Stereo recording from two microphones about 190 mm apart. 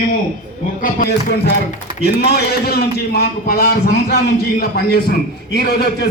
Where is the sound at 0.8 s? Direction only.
55° left (ahead or behind).